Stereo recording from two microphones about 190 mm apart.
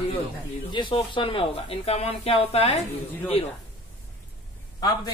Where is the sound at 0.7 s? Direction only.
25° left (ahead or behind).